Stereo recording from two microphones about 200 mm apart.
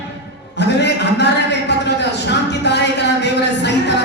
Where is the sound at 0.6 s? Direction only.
60° left (ahead or behind).